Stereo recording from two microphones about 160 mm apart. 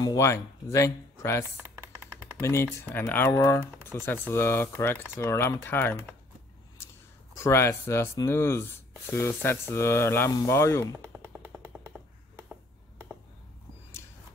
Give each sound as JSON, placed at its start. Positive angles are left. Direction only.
{"t": 0.0, "sound": "speech", "side_deg": 20}
{"t": 2.4, "sound": "speech", "side_deg": 15}
{"t": 7.3, "sound": "speech", "side_deg": 15}
{"t": 11.2, "sound": "vehicle", "side_deg": -15}